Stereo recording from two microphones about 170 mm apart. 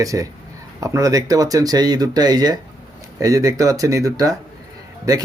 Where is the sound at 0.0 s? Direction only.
20° right (ahead or behind).